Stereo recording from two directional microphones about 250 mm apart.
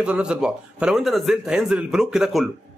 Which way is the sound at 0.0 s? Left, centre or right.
Centre.